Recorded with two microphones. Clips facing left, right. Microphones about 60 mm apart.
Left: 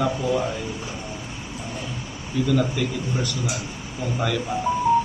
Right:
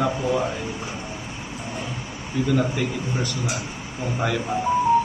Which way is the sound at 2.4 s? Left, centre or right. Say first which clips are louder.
Even; right.